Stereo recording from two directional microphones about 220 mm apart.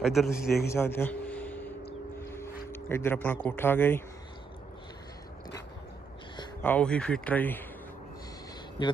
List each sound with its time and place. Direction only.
0.0 s a man's voice: centre (ahead or behind)
0.3 s a man's voice: 45° left (ahead or behind)
0.7 s speech: 10° left (ahead or behind)
6.6 s speech: 5° left (ahead or behind)